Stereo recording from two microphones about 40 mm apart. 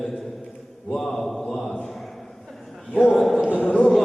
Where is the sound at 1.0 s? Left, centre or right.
Centre.